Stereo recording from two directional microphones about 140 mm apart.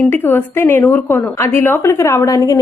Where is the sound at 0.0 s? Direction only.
15° left (ahead or behind).